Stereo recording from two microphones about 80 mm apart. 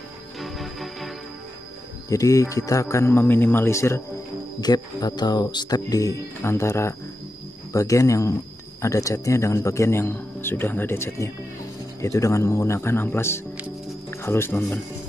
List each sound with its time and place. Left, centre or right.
0.4 s music: centre
2.0 s a man's voice: left
4.6 s speech: left
6.4 s a man's voice: left